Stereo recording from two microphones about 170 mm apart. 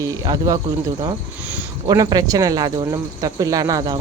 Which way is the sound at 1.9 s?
20° right (ahead or behind).